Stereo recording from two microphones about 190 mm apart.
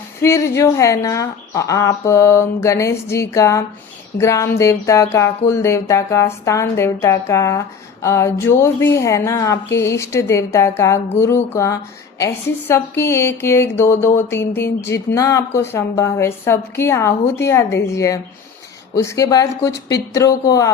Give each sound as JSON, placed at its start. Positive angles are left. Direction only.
{"t": 0.2, "sound": "speech", "side_deg": 15}